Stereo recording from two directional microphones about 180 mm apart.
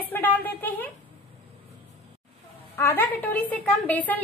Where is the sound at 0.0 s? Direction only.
10° left (ahead or behind).